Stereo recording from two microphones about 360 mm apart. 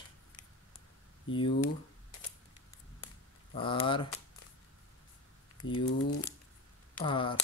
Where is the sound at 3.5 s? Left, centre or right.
Centre.